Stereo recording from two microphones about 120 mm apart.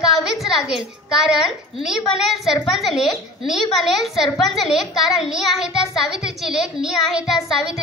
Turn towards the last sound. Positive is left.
turn(degrees=-5)  # may be behind; listen again after turning